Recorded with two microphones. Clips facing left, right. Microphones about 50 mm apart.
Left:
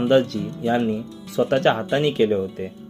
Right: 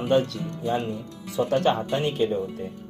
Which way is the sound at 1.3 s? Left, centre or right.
Left.